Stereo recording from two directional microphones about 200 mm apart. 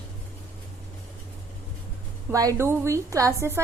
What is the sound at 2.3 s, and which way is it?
A woman's voice, 15° right (ahead or behind).